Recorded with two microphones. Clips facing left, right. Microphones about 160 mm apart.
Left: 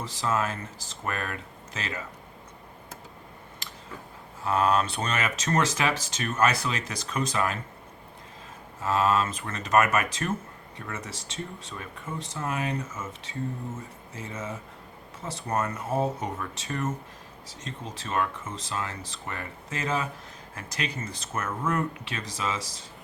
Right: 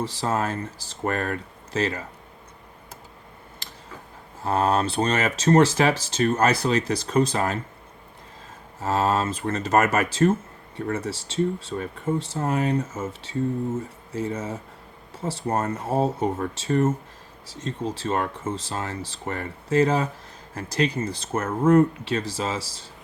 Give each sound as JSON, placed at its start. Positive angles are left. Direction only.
{"t": 0.0, "sound": "speech", "side_deg": -35}
{"t": 4.4, "sound": "speech", "side_deg": -35}
{"t": 8.8, "sound": "speech", "side_deg": -35}